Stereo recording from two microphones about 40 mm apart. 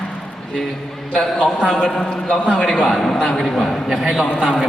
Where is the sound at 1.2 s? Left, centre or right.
Centre.